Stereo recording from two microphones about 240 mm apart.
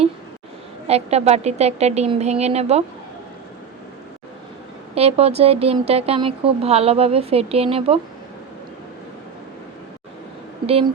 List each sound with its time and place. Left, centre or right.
0.9 s speech: right
4.9 s speech: right